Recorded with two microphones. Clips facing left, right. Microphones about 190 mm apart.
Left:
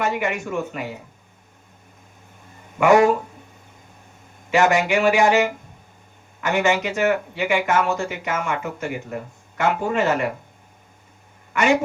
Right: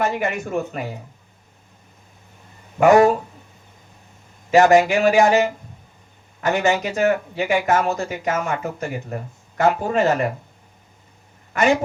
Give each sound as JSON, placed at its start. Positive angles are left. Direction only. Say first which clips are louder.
{"t": 0.0, "sound": "speech", "louder": "right 1 dB", "side_deg": -40}
{"t": 2.7, "sound": "speech", "louder": "right 2 dB", "side_deg": -40}
{"t": 4.5, "sound": "speech", "louder": "right 4 dB", "side_deg": -40}
{"t": 11.5, "sound": "speech", "louder": "right 1 dB", "side_deg": -40}